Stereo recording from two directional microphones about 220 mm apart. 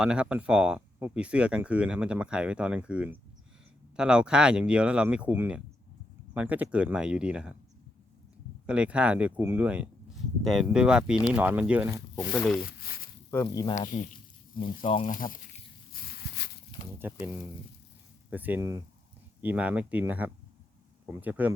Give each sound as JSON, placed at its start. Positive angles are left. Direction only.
{"t": 0.0, "sound": "speech", "side_deg": -5}
{"t": 8.6, "sound": "speech", "side_deg": -5}
{"t": 12.3, "sound": "speech", "side_deg": 5}
{"t": 12.6, "sound": "speech", "side_deg": 45}
{"t": 13.3, "sound": "speech", "side_deg": 15}
{"t": 13.7, "sound": "speech", "side_deg": 35}
{"t": 14.5, "sound": "speech", "side_deg": 25}
{"t": 15.1, "sound": "speech", "side_deg": 40}
{"t": 15.9, "sound": "a sound", "side_deg": 45}
{"t": 17.0, "sound": "speech", "side_deg": -10}